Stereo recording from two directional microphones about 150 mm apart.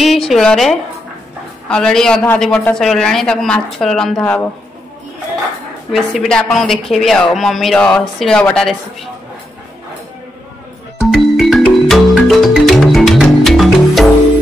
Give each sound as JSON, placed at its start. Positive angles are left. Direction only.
{"t": 0.0, "sound": "a woman's voice", "side_deg": 0}
{"t": 5.9, "sound": "a woman's voice", "side_deg": 0}
{"t": 11.0, "sound": "music", "side_deg": 0}